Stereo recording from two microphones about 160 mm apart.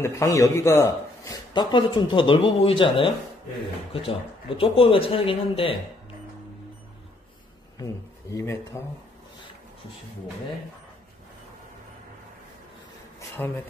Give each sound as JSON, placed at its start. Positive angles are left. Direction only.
{"t": 0.0, "sound": "a man's voice", "side_deg": 15}
{"t": 7.8, "sound": "speech", "side_deg": 20}
{"t": 13.4, "sound": "speech", "side_deg": 10}